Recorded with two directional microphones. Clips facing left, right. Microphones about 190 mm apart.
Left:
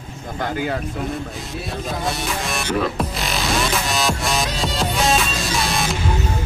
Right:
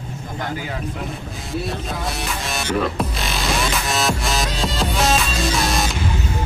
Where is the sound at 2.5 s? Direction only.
Centre (ahead or behind).